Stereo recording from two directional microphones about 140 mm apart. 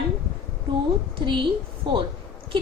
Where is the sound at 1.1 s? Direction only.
35° right (ahead or behind).